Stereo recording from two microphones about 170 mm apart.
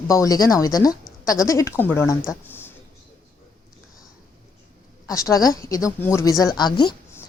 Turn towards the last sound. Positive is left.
turn(degrees=20)  # may be behind; listen again after turning